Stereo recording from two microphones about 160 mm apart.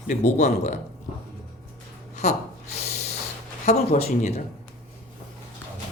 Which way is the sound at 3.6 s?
45° left (ahead or behind).